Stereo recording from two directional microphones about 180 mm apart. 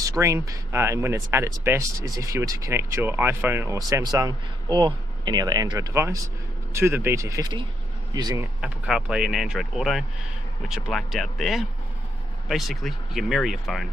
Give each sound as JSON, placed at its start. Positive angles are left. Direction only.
{"t": 0.0, "sound": "speech", "side_deg": -15}
{"t": 8.6, "sound": "speech", "side_deg": -5}